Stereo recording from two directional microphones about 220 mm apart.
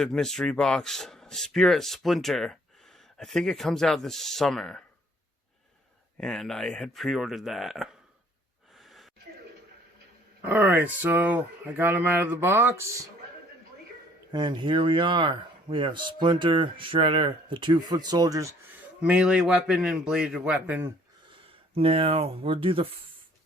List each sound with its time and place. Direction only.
0.0 s speech: 5° left (ahead or behind)
6.1 s speech: centre (ahead or behind)
8.8 s a sound: centre (ahead or behind)
10.4 s speech: 10° right (ahead or behind)
14.3 s speech: 20° right (ahead or behind)
19.0 s speech: 5° right (ahead or behind)
21.8 s speech: 25° right (ahead or behind)